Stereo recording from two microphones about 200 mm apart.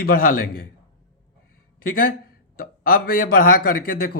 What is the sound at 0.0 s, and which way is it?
Speech, 45° left (ahead or behind).